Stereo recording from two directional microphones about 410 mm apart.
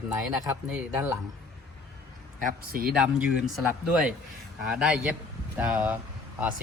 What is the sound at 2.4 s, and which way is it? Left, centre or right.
Speech, right.